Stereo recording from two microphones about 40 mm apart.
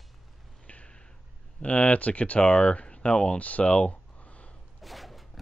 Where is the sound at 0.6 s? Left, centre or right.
Left.